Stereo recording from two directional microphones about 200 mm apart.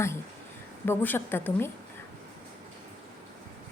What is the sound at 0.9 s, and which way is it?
Speech, 10° left (ahead or behind).